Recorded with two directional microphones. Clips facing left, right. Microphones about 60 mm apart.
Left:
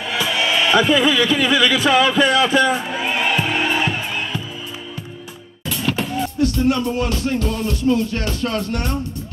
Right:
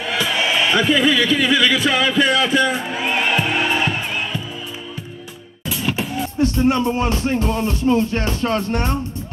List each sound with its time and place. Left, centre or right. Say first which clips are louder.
0.0 s music: even; centre
0.7 s speech: left 2 dB; centre
5.7 s music: left 1 dB; centre
6.4 s music: right 2 dB; right